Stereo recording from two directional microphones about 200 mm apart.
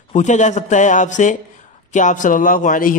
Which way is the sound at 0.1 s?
35° left (ahead or behind).